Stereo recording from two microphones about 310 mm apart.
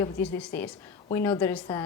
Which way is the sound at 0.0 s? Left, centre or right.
Centre.